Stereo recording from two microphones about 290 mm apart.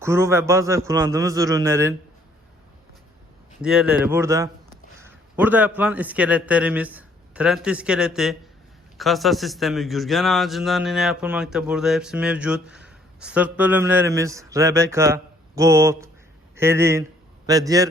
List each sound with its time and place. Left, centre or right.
0.0 s a man's voice: centre
3.6 s a man's voice: centre